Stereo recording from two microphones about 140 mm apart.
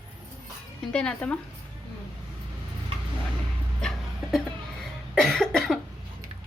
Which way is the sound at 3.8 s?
Centre (ahead or behind).